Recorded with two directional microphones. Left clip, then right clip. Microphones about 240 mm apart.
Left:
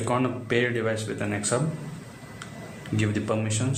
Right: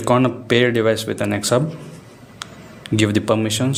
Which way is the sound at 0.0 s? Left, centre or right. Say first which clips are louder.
Right 9 dB; right.